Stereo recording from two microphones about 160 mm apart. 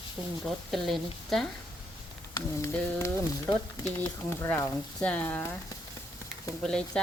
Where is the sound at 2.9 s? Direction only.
15° left (ahead or behind).